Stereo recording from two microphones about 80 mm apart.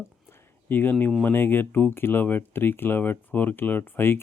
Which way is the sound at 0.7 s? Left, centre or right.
Left.